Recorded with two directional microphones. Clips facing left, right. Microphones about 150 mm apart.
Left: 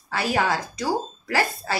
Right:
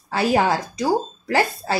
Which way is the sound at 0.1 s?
30° right (ahead or behind).